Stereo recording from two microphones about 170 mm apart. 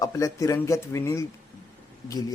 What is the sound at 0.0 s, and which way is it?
Speech, 20° left (ahead or behind).